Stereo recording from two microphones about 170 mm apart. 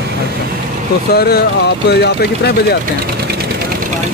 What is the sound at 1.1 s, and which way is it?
Speech, 65° left (ahead or behind).